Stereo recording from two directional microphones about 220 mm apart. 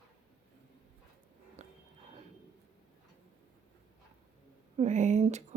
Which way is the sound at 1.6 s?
30° right (ahead or behind).